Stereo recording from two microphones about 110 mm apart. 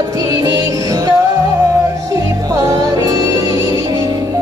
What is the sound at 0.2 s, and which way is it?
Music, 35° right (ahead or behind).